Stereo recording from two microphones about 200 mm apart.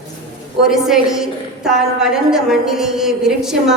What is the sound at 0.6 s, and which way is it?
A woman's voice, centre (ahead or behind).